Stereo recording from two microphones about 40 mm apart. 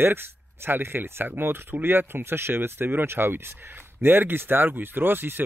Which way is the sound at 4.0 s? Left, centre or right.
Right.